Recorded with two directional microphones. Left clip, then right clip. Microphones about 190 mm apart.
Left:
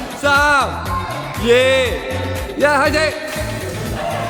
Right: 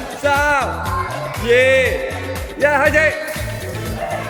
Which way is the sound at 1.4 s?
30° left (ahead or behind).